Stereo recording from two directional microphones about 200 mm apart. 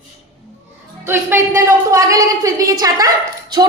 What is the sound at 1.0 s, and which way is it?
A woman's voice, 10° right (ahead or behind).